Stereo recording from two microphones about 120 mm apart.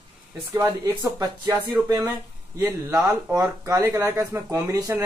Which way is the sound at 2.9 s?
30° right (ahead or behind).